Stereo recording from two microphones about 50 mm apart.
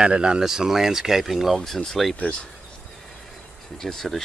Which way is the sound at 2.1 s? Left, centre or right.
Left.